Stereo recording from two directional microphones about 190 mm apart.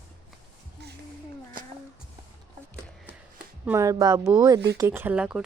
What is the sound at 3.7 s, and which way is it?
Speech, 15° right (ahead or behind).